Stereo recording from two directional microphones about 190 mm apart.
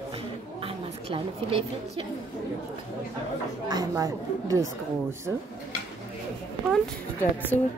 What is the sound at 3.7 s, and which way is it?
Speech, 20° right (ahead or behind).